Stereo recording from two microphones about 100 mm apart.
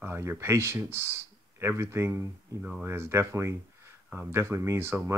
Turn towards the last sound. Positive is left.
turn(degrees=-25)  # may be behind; listen again after turning